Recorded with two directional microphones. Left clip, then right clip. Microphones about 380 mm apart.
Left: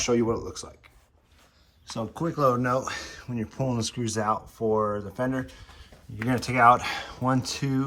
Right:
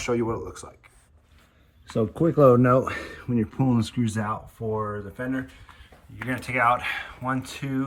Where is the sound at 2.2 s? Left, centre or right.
Right.